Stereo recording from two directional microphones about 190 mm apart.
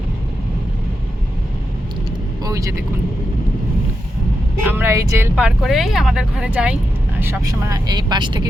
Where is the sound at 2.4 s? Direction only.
15° right (ahead or behind).